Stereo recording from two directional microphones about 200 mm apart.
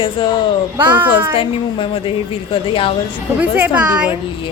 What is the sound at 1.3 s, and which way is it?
A woman's voice, 25° left (ahead or behind).